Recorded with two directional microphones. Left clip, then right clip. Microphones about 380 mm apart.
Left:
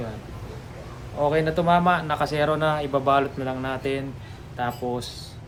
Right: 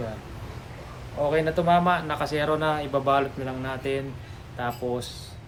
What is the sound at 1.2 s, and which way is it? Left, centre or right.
Speech, centre.